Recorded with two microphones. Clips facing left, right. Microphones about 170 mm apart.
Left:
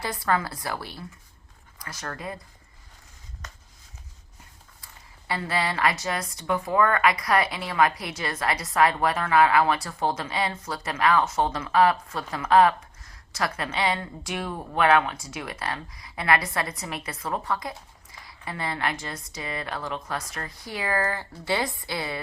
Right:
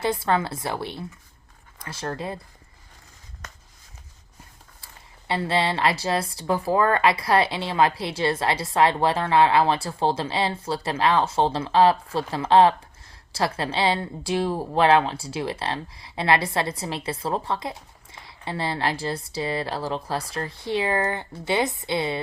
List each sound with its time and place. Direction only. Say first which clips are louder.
0.0 s a woman's voice: right 3 dB; 25° right (ahead or behind)
5.3 s a woman's voice: right 4 dB; 25° right (ahead or behind)